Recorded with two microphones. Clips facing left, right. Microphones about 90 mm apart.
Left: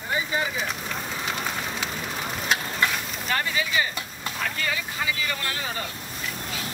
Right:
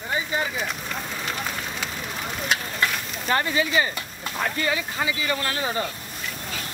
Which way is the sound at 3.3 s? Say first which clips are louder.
Right 4 dB; 30° right (ahead or behind).